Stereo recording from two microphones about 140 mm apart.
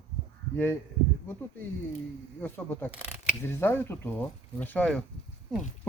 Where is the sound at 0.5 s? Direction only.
15° left (ahead or behind).